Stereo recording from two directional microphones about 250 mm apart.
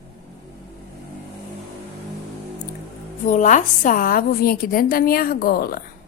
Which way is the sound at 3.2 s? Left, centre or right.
Left.